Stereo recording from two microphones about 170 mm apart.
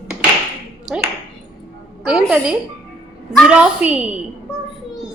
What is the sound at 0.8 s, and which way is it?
Ping, 5° right (ahead or behind).